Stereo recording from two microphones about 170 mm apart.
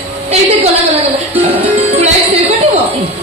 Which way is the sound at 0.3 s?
35° right (ahead or behind).